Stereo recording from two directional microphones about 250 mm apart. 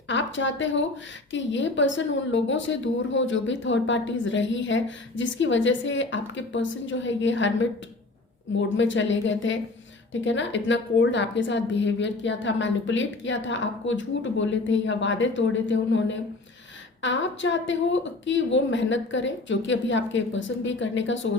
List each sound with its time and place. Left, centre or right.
0.1 s a woman's voice: left
8.7 s a woman's voice: left